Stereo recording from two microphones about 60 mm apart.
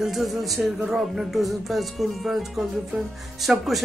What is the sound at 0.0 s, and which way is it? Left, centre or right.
Music, centre.